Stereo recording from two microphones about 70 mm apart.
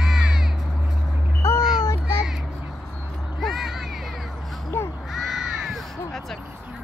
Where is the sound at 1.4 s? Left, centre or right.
Left.